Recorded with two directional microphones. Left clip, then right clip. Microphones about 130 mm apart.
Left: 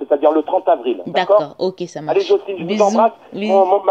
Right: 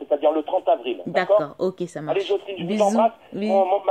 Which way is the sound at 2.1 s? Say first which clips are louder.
Left 8 dB; 35° left (ahead or behind).